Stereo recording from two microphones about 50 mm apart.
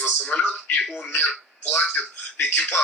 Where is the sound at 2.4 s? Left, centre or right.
Left.